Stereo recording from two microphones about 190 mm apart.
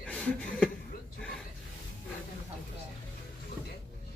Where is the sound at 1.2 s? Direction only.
5° left (ahead or behind).